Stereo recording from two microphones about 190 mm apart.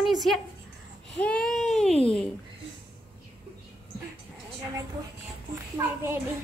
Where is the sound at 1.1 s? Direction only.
5° left (ahead or behind).